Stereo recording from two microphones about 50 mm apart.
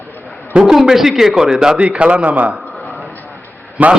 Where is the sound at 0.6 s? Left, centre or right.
Centre.